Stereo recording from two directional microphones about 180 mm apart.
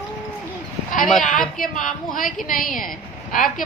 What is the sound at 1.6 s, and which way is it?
A woman's voice, 50° left (ahead or behind).